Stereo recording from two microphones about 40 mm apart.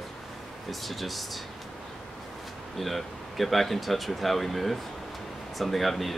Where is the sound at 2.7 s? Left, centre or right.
Centre.